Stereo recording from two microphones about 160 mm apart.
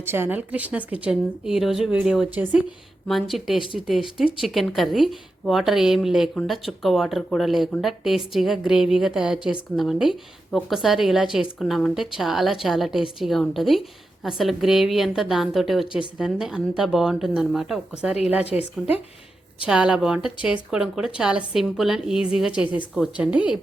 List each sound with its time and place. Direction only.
0.0 s a woman's voice: 15° right (ahead or behind)
19.6 s a woman's voice: 5° right (ahead or behind)